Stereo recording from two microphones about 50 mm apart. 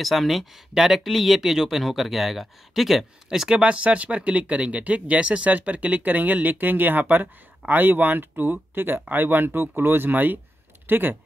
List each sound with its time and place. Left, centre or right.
0.0 s speech: centre
3.3 s speech: centre; by 11.1 s right